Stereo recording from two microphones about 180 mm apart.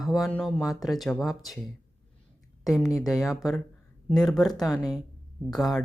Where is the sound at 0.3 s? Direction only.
5° left (ahead or behind).